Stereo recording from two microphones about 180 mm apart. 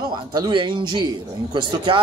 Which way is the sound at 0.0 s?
25° right (ahead or behind).